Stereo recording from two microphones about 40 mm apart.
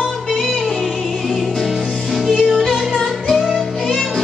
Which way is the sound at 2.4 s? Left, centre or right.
Centre.